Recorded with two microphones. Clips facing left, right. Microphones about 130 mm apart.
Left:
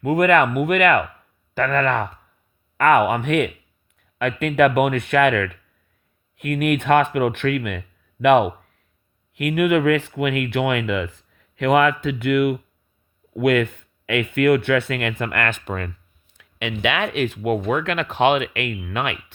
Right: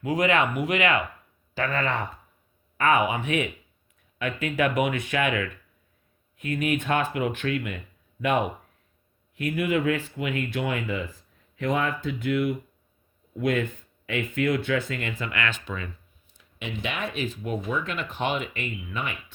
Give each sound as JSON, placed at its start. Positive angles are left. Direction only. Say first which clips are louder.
{"t": 0.0, "sound": "speech", "louder": "left 7 dB", "side_deg": 55}
{"t": 16.3, "sound": "speech", "louder": "left 7 dB", "side_deg": 75}